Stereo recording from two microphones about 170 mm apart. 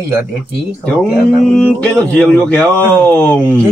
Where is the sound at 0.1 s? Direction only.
10° right (ahead or behind).